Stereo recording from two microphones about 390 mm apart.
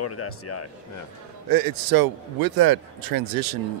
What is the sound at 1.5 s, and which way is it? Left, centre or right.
A man's voice, right.